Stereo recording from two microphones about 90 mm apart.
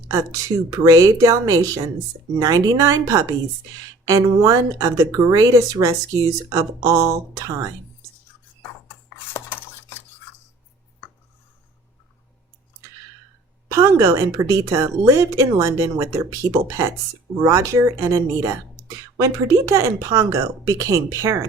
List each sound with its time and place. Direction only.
0.1 s speech: 35° right (ahead or behind)
9.1 s cutlery: 25° left (ahead or behind)
13.7 s speech: 35° right (ahead or behind)